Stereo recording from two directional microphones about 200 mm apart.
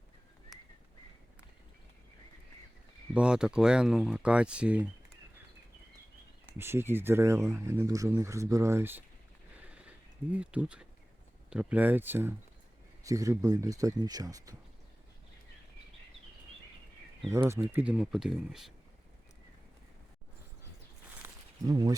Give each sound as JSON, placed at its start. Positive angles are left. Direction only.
{"t": 3.2, "sound": "speech", "side_deg": -5}
{"t": 6.6, "sound": "speech", "side_deg": -10}
{"t": 9.6, "sound": "a sound", "side_deg": -5}
{"t": 10.3, "sound": "speech", "side_deg": -5}
{"t": 17.3, "sound": "speech", "side_deg": -15}
{"t": 21.2, "sound": "a sound", "side_deg": -10}
{"t": 21.7, "sound": "speech", "side_deg": -20}